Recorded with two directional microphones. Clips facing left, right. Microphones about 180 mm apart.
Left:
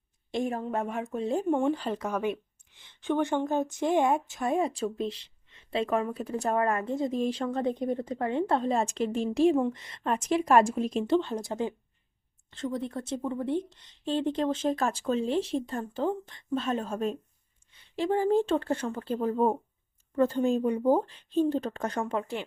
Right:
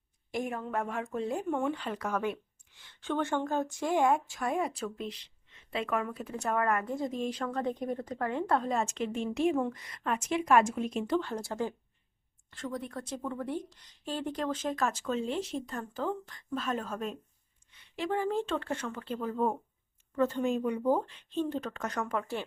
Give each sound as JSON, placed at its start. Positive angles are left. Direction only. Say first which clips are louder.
{"t": 0.3, "sound": "speech", "louder": "left 4 dB", "side_deg": 30}
{"t": 2.0, "sound": "speech", "louder": "left 3 dB", "side_deg": 20}
{"t": 9.6, "sound": "speech", "louder": "left 4 dB", "side_deg": 20}